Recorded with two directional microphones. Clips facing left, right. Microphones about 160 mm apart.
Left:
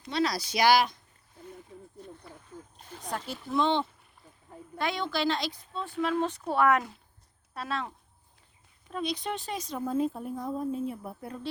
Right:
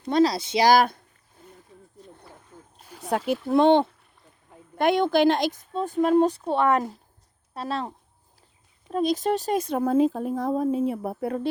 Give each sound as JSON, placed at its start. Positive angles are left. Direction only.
{"t": 0.1, "sound": "speech", "side_deg": -35}
{"t": 0.3, "sound": "speech", "side_deg": -25}
{"t": 0.7, "sound": "speech", "side_deg": -50}
{"t": 2.7, "sound": "a sound", "side_deg": -5}
{"t": 3.1, "sound": "speech", "side_deg": -60}
{"t": 6.3, "sound": "speech", "side_deg": -25}
{"t": 8.9, "sound": "speech", "side_deg": -45}